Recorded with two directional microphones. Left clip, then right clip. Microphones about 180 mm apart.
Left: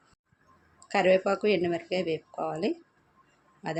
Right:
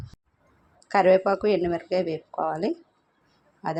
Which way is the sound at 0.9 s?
10° right (ahead or behind).